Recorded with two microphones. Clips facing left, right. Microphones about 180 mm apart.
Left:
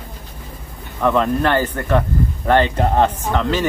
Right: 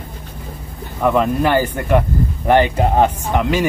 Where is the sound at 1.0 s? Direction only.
10° right (ahead or behind).